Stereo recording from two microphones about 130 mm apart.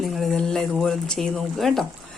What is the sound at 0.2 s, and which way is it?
Speech, 5° left (ahead or behind).